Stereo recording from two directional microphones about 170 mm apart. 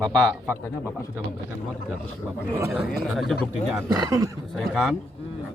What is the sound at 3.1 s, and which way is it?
Speech, centre (ahead or behind).